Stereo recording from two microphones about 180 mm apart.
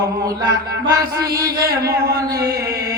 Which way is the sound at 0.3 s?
20° right (ahead or behind).